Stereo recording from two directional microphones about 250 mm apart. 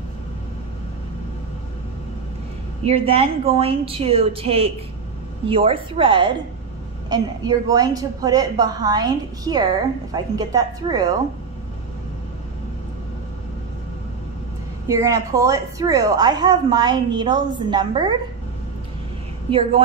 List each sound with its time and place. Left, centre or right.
2.8 s a woman's voice: right
14.9 s a woman's voice: centre